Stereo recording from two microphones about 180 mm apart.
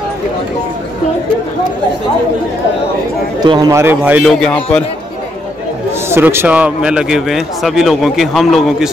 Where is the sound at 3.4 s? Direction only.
20° right (ahead or behind).